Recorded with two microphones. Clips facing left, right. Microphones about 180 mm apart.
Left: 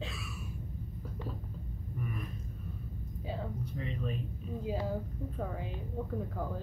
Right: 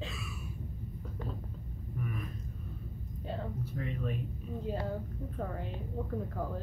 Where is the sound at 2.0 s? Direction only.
Centre (ahead or behind).